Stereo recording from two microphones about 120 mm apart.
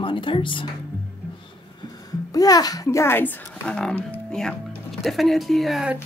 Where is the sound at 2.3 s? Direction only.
30° left (ahead or behind); by 5.9 s centre (ahead or behind).